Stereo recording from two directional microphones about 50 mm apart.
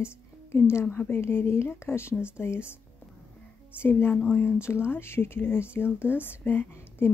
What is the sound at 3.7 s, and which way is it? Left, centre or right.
A woman's voice, left.